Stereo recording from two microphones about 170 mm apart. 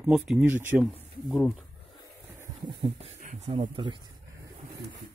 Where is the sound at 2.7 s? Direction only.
30° right (ahead or behind).